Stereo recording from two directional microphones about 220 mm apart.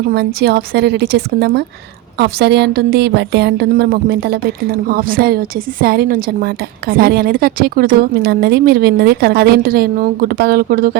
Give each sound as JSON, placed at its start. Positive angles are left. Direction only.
{"t": 0.1, "sound": "a woman's voice", "side_deg": -45}